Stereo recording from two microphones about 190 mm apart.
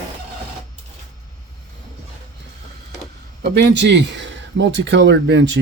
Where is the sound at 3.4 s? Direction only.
65° right (ahead or behind).